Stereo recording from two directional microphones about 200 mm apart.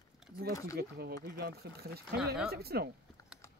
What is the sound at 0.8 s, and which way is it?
Speech, 55° right (ahead or behind).